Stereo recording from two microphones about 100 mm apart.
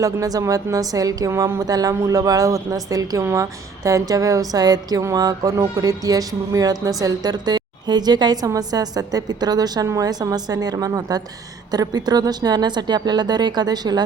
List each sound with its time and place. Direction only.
0.0 s speech: 35° right (ahead or behind)